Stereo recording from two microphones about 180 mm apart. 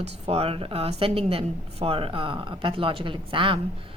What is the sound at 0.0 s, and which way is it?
Speech, 35° right (ahead or behind).